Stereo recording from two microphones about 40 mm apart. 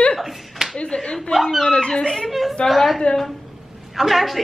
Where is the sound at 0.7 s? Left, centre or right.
Left.